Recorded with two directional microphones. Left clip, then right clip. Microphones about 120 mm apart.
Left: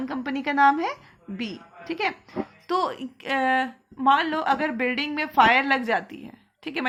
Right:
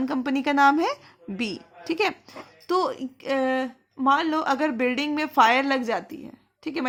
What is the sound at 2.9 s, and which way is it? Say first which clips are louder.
Speech: even; 50° right (ahead or behind).